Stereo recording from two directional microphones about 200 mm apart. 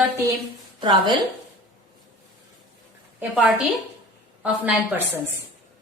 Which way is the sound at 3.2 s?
5° right (ahead or behind).